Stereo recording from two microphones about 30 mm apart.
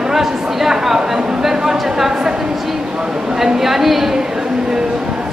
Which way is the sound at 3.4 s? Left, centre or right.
Centre.